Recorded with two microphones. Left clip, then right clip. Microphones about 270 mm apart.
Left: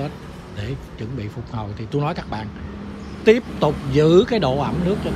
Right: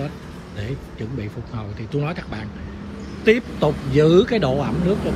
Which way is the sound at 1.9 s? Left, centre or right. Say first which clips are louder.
Left 3 dB; centre.